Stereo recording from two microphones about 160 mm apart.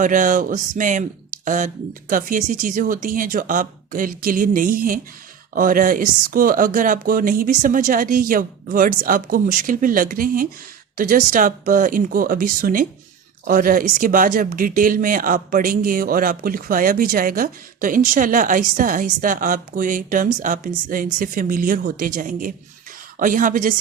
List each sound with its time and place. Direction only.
0.0 s speech: 55° right (ahead or behind)